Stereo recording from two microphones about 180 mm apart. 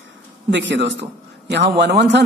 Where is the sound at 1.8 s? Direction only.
65° right (ahead or behind).